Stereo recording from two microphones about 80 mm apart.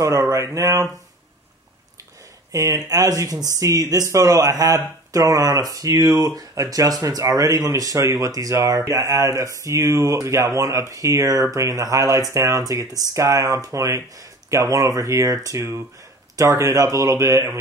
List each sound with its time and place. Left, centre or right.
0.0 s mantra: right
2.5 s speech: right